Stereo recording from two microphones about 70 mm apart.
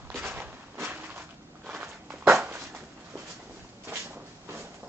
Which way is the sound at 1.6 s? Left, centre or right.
Right.